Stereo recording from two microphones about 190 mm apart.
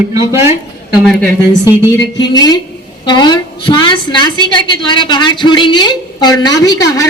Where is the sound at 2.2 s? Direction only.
20° left (ahead or behind).